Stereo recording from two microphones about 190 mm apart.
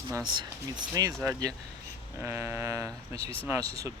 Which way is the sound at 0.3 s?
20° right (ahead or behind).